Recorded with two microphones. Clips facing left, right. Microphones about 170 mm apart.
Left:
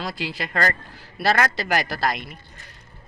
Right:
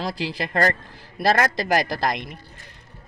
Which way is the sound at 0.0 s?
35° right (ahead or behind).